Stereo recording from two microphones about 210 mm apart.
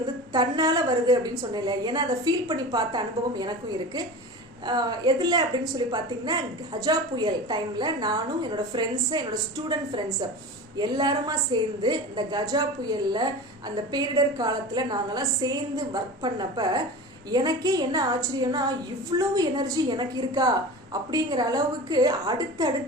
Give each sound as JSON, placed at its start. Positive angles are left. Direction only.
{"t": 0.3, "sound": "a woman's voice", "side_deg": -15}
{"t": 4.6, "sound": "a woman's voice", "side_deg": -20}